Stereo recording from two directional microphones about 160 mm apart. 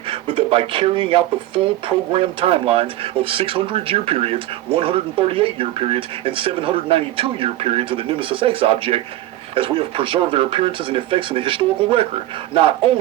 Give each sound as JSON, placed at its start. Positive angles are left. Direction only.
{"t": 0.1, "sound": "speech", "side_deg": -35}